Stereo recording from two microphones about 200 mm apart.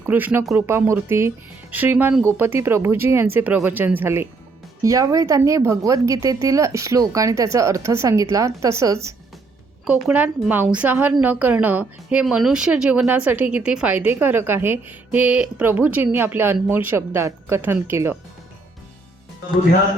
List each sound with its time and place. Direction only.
0.0 s a woman's voice: 10° right (ahead or behind)